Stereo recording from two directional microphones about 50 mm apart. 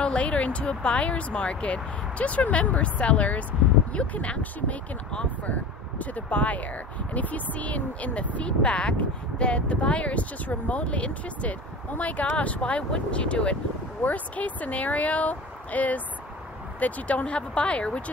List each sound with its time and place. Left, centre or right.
0.0 s speech: left